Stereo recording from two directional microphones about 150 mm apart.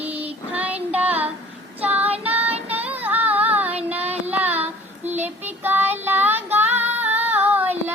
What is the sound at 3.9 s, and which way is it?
Child singing, 45° right (ahead or behind).